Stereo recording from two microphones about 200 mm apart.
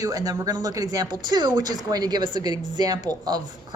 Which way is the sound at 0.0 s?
20° right (ahead or behind).